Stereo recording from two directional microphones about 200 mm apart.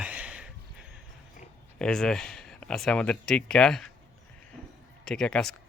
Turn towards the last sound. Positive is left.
turn(degrees=5)  # may be behind; listen again after turning